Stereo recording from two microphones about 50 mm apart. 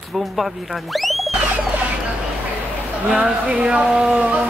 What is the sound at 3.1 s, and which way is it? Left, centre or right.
Speech, right.